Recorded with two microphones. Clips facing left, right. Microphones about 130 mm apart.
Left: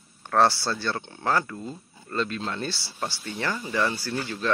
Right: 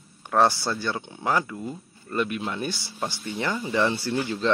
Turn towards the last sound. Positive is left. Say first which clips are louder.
# right 4 dB
turn(degrees=-15)  # may be behind; listen again after turning